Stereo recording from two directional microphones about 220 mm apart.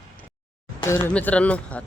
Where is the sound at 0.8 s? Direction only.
10° left (ahead or behind).